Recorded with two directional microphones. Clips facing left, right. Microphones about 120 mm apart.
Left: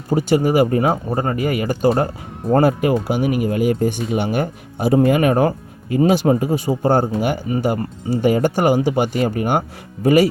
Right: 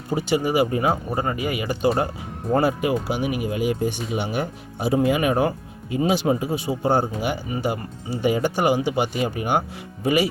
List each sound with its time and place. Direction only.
0.1 s speech: 45° left (ahead or behind)